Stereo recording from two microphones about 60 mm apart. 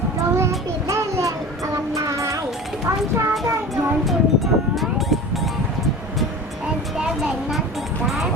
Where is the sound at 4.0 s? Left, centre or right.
Centre.